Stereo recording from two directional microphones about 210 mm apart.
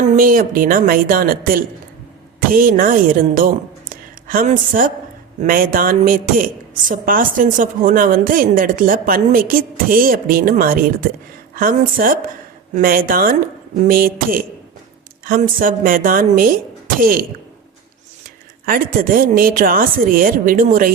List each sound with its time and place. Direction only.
0.1 s a woman's voice: 40° right (ahead or behind)
18.6 s a woman's voice: 40° right (ahead or behind)